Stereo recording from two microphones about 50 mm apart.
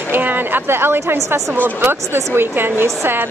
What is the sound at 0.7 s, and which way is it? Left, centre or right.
A woman's voice, right.